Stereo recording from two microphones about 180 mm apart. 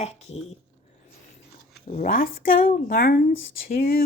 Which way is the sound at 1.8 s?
45° left (ahead or behind).